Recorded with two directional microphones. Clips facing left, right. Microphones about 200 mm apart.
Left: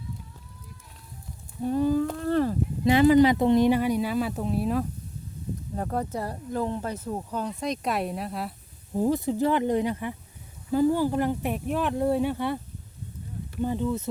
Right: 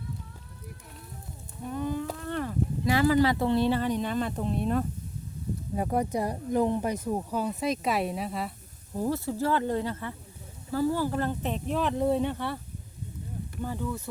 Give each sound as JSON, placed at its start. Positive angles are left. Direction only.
{"t": 1.6, "sound": "speech", "side_deg": 35}
{"t": 2.2, "sound": "a sound", "side_deg": 35}
{"t": 2.8, "sound": "speech", "side_deg": 20}
{"t": 5.7, "sound": "speech", "side_deg": -10}
{"t": 8.9, "sound": "speech", "side_deg": 15}
{"t": 13.6, "sound": "speech", "side_deg": 20}